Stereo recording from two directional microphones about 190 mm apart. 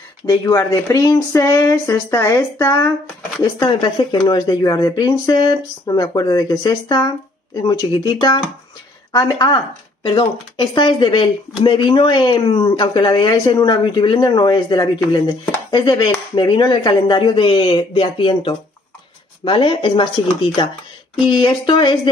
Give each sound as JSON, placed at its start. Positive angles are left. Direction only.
{"t": 0.3, "sound": "speech", "side_deg": 20}
{"t": 21.3, "sound": "speech", "side_deg": 25}